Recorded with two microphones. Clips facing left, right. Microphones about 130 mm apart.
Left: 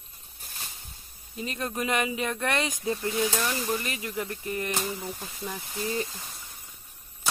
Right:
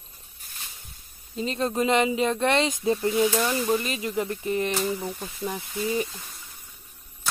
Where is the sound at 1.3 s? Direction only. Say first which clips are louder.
Right 6 dB; 25° right (ahead or behind).